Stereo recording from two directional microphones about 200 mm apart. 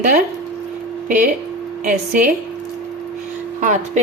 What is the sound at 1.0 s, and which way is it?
Speech, 40° right (ahead or behind).